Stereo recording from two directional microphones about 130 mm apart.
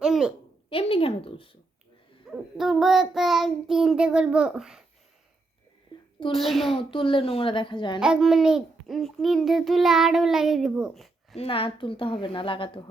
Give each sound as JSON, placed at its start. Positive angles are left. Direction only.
{"t": 0.0, "sound": "a sound", "side_deg": -5}
{"t": 0.7, "sound": "a woman's voice", "side_deg": 45}
{"t": 2.3, "sound": "a child's voice", "side_deg": -5}
{"t": 6.3, "sound": "a child's voice", "side_deg": 0}
{"t": 6.7, "sound": "a child's voice", "side_deg": 40}
{"t": 8.0, "sound": "a child's voice", "side_deg": -5}
{"t": 11.3, "sound": "a woman's voice", "side_deg": 45}